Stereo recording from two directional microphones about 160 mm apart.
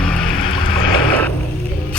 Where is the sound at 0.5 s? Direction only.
30° left (ahead or behind).